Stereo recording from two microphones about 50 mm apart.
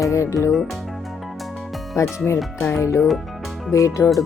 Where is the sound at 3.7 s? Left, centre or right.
Left.